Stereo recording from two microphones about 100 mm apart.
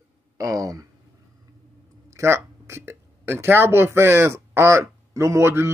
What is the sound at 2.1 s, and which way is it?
Speech, 25° right (ahead or behind).